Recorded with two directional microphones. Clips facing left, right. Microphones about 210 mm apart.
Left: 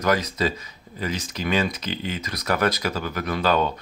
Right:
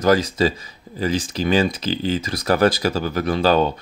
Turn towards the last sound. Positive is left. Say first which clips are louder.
# right 5 dB
turn(degrees=-30)  # may be behind; listen again after turning